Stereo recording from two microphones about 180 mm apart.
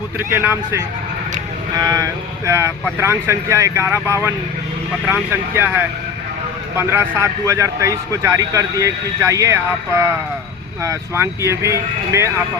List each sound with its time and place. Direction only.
0.2 s a man's voice: 15° right (ahead or behind)